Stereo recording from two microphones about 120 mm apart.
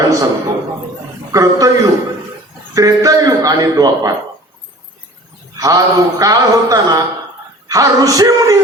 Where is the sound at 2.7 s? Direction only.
30° right (ahead or behind).